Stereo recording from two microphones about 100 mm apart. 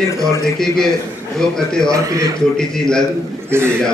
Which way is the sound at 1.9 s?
35° right (ahead or behind).